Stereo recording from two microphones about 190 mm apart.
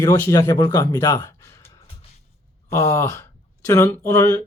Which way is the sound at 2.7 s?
15° left (ahead or behind).